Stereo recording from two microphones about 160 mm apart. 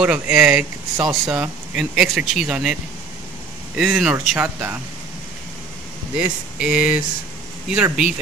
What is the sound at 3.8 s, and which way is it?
Speech, 5° right (ahead or behind).